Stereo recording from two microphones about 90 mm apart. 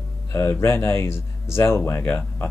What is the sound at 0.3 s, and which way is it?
Speech, 25° left (ahead or behind).